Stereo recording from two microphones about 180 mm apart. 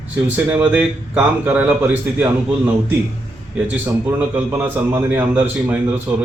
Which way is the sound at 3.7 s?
10° right (ahead or behind).